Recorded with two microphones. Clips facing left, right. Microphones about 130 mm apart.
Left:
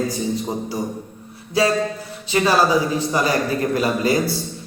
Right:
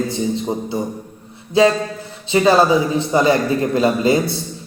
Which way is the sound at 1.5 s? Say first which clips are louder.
Right 4 dB; 25° right (ahead or behind).